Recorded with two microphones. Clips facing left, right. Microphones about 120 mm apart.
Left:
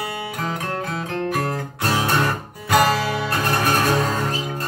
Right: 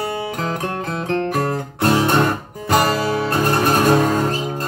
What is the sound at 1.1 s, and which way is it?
Music, 40° right (ahead or behind).